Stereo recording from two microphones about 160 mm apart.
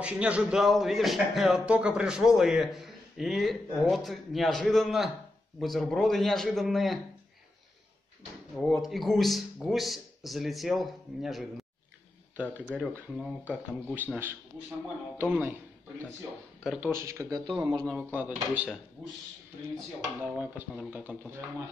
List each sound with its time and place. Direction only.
0.0 s speech: 5° right (ahead or behind)
8.8 s speech: centre (ahead or behind)
12.7 s speech: 5° right (ahead or behind)
15.1 s speech: 15° right (ahead or behind)
16.6 s speech: 5° right (ahead or behind)
16.9 s speech: 20° right (ahead or behind)
17.9 s speech: 10° right (ahead or behind)
20.0 s speech: 10° right (ahead or behind)